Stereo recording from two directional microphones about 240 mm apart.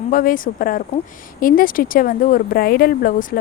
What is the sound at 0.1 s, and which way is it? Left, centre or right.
Speech, left.